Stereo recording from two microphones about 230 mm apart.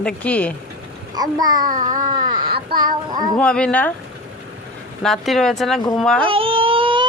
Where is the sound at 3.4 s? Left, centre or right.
Centre.